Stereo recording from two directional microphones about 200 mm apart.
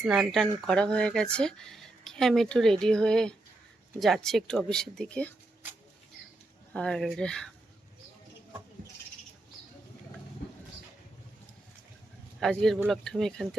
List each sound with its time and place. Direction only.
0.0 s speech: centre (ahead or behind)
6.7 s speech: 5° left (ahead or behind)
12.4 s speech: centre (ahead or behind)